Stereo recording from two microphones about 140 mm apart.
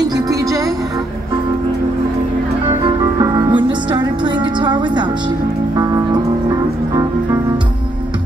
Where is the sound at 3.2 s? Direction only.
30° right (ahead or behind).